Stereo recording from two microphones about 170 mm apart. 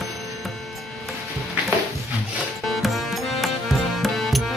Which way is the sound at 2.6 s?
Centre (ahead or behind).